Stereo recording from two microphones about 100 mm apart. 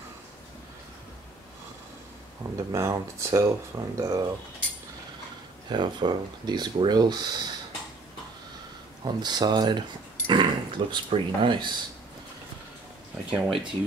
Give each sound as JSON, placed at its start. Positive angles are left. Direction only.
{"t": 2.5, "sound": "speech", "side_deg": -30}
{"t": 5.7, "sound": "speech", "side_deg": -45}
{"t": 9.0, "sound": "speech", "side_deg": -45}
{"t": 13.3, "sound": "speech", "side_deg": -5}